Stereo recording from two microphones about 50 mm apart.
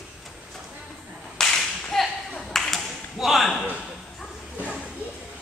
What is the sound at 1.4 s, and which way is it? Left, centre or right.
Clapping, centre.